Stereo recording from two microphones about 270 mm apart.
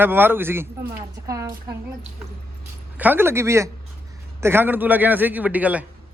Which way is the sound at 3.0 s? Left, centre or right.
Centre.